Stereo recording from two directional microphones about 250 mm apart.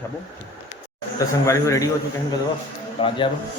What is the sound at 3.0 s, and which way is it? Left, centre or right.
Speech, centre.